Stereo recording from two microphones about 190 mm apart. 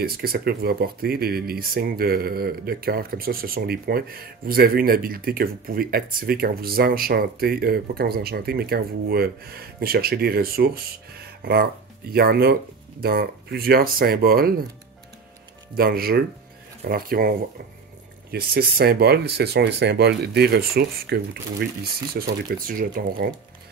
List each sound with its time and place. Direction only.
0.0 s speech: 55° right (ahead or behind)
15.7 s speech: 50° right (ahead or behind)
18.3 s speech: 55° right (ahead or behind)
22.1 s speech: 50° right (ahead or behind)